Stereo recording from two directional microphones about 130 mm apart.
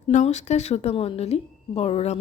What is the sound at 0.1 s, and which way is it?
A woman's voice, 65° left (ahead or behind).